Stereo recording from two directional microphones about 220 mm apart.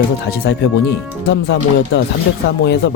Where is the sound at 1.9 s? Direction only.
45° left (ahead or behind).